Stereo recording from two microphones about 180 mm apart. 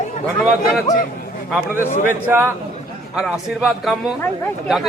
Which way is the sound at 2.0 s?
10° right (ahead or behind).